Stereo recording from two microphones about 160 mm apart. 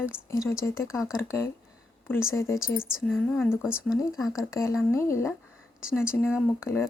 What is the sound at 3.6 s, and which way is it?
Speech, 5° right (ahead or behind).